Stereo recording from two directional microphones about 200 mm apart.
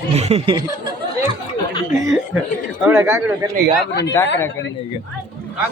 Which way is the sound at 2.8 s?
10° right (ahead or behind).